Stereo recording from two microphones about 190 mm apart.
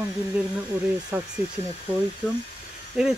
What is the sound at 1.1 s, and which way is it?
Speech, 10° right (ahead or behind).